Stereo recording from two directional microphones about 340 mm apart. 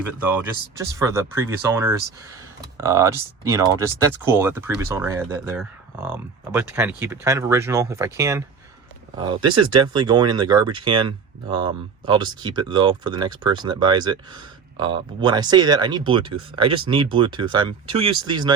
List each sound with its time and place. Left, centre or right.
0.2 s speech: centre